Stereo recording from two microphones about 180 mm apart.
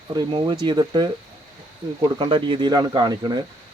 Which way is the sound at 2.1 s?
25° right (ahead or behind).